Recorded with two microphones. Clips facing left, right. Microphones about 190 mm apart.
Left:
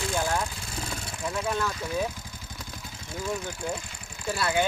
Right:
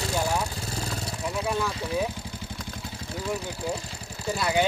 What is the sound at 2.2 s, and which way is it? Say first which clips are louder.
Vehicle: right 6 dB; 30° right (ahead or behind).